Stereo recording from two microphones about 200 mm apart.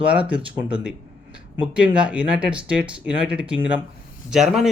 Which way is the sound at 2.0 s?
5° right (ahead or behind).